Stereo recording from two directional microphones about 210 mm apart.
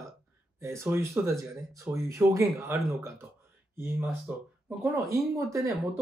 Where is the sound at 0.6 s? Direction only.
15° right (ahead or behind).